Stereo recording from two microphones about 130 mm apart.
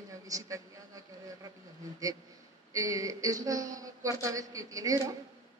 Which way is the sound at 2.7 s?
25° right (ahead or behind).